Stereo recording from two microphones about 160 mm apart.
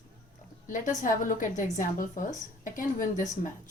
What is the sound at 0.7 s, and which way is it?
A woman's voice, 55° left (ahead or behind).